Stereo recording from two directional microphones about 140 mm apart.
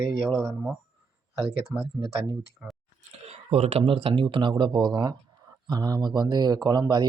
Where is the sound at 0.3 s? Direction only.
Centre (ahead or behind).